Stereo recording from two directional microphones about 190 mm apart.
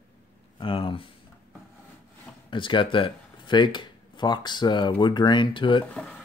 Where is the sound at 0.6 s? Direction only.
25° left (ahead or behind).